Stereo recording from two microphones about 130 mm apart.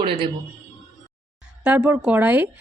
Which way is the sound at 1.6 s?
10° right (ahead or behind).